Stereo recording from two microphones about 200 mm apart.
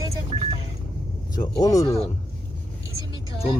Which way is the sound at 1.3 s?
20° left (ahead or behind).